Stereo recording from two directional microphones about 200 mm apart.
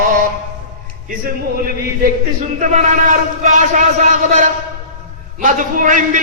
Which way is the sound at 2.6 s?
35° right (ahead or behind).